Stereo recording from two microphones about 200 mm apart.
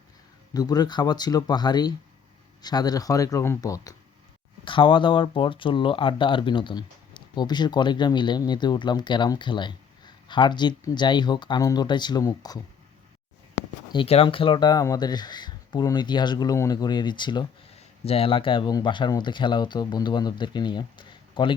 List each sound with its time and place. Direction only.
0.5 s speech: 20° left (ahead or behind)
13.9 s speech: 30° left (ahead or behind)